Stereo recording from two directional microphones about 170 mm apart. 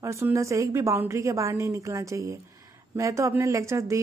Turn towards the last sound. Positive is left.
turn(degrees=-15)  # may be behind; listen again after turning